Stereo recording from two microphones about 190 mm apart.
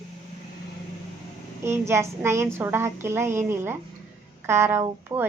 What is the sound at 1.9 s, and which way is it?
A woman's voice, 15° right (ahead or behind).